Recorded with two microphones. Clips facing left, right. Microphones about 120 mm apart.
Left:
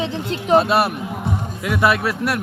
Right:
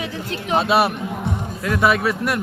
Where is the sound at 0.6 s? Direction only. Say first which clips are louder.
Right 2 dB; centre (ahead or behind).